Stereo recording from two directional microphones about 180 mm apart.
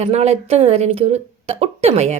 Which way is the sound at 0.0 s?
35° right (ahead or behind).